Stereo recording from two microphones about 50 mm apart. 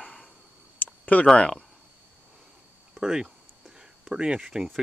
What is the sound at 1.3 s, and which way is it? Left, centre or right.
Speech, left.